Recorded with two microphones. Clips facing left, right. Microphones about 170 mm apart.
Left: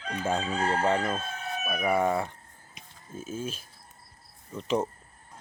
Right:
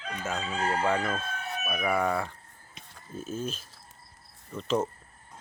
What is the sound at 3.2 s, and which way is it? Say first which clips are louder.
Speech: right 1 dB; 10° left (ahead or behind).